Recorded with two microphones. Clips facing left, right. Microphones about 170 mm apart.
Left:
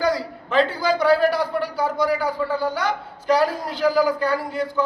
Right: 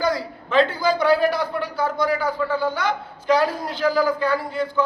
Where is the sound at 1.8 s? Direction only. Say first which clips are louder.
Even; 10° left (ahead or behind).